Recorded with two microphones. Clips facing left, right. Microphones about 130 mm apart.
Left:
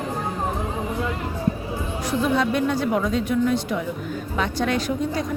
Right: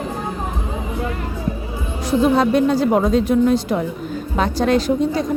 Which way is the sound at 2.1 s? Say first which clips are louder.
Right 7 dB; 35° right (ahead or behind).